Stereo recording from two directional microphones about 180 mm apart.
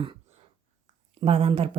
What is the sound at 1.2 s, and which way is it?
Speech, 30° right (ahead or behind).